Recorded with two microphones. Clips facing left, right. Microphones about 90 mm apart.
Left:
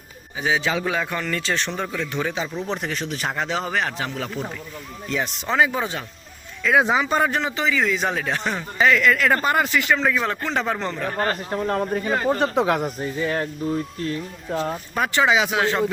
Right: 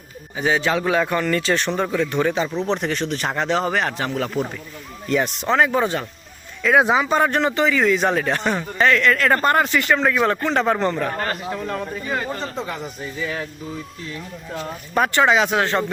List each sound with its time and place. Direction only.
0.3 s speech: centre (ahead or behind)
11.2 s speech: 35° left (ahead or behind)
12.4 s speech: 65° left (ahead or behind)
13.0 s speech: 40° left (ahead or behind)
14.5 s speech: 35° left (ahead or behind)
14.9 s speech: centre (ahead or behind)